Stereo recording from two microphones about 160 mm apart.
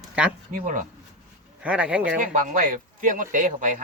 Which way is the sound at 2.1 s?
55° right (ahead or behind).